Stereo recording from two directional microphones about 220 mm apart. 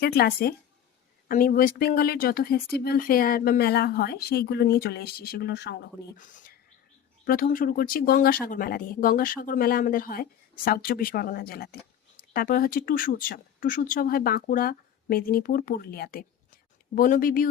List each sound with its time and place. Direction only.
0.0 s speech: 45° left (ahead or behind)
6.1 s speech: 35° left (ahead or behind)